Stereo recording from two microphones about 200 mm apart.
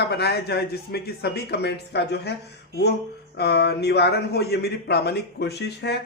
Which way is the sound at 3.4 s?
55° left (ahead or behind).